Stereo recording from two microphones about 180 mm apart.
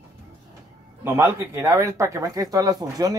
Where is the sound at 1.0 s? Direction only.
15° right (ahead or behind).